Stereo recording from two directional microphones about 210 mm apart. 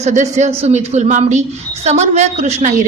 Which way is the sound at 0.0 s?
35° right (ahead or behind).